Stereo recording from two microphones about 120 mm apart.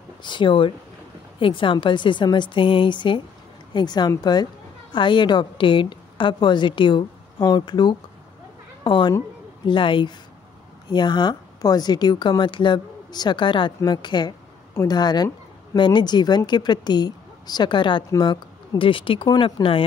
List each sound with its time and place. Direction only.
0.2 s a woman's voice: 40° left (ahead or behind)
14.7 s a woman's voice: 25° left (ahead or behind)
15.0 s speech: 35° left (ahead or behind)